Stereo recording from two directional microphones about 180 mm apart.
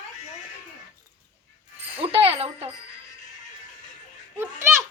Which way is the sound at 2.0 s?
30° right (ahead or behind).